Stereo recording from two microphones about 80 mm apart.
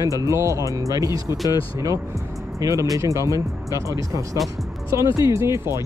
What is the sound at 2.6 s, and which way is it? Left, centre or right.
Speech, right.